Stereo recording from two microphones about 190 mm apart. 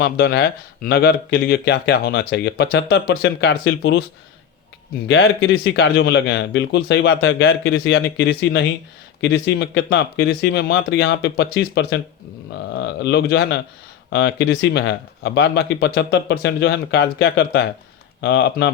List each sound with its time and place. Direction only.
0.0 s speech: 60° left (ahead or behind)
5.0 s speech: 90° left; by 18.7 s 65° left (ahead or behind)